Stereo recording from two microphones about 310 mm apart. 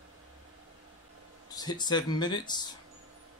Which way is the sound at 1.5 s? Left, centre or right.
Centre.